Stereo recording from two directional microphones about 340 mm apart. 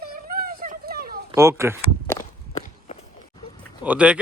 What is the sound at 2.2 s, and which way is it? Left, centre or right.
Walk, left.